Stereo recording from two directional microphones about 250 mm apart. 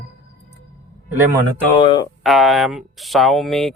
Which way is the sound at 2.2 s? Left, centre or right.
Centre.